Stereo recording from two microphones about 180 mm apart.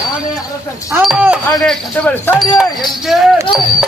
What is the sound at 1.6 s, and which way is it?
Speech, 10° left (ahead or behind).